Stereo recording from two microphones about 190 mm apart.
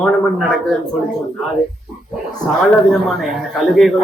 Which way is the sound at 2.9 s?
Centre (ahead or behind).